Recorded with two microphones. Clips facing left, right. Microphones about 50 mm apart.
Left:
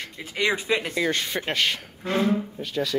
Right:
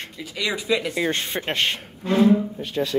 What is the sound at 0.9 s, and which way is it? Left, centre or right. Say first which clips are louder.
Speech: right 1 dB; right.